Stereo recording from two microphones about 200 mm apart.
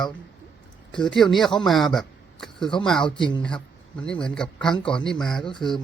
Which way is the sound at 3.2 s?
25° left (ahead or behind).